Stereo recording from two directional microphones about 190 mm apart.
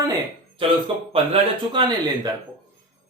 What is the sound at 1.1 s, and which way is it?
Speech, 30° right (ahead or behind).